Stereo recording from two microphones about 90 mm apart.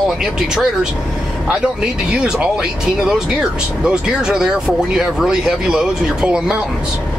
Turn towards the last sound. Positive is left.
turn(degrees=-10)  # may be behind; listen again after turning